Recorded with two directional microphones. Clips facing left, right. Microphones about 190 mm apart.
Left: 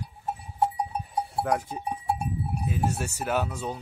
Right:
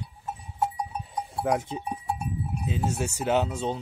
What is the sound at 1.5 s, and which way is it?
Speech, 20° right (ahead or behind).